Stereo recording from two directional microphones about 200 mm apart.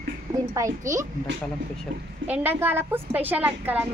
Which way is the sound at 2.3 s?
10° right (ahead or behind).